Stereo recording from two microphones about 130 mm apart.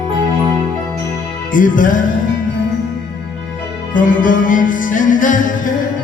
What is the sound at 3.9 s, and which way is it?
Music, 90° left.